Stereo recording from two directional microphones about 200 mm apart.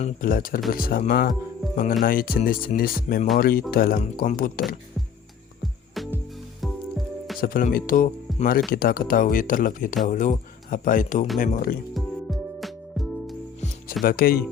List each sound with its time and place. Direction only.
0.0 s speech: 45° left (ahead or behind)
7.4 s speech: 45° left (ahead or behind)
11.9 s music: centre (ahead or behind)
14.0 s speech: 45° left (ahead or behind)